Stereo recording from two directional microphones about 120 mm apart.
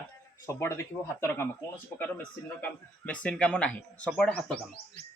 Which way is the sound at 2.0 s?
15° left (ahead or behind).